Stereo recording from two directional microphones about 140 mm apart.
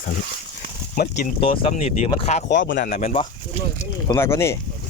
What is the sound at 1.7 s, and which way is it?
Speech, 50° left (ahead or behind).